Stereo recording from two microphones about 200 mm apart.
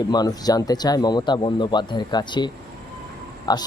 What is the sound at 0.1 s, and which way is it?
Speech, 20° left (ahead or behind).